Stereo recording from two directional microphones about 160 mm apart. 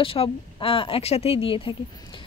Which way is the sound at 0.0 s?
35° left (ahead or behind).